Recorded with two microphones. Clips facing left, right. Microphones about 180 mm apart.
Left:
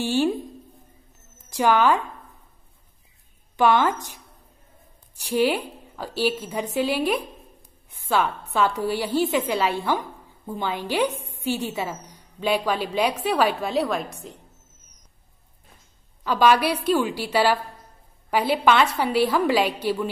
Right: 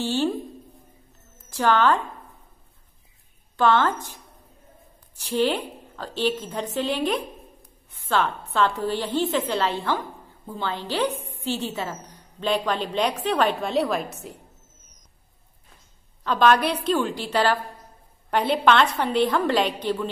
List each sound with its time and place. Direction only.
0.0 s a woman's voice: 10° left (ahead or behind)
1.5 s speech: 10° left (ahead or behind)
3.5 s a woman's voice: 10° left (ahead or behind); by 14.3 s 5° right (ahead or behind)
16.3 s a woman's voice: 10° left (ahead or behind)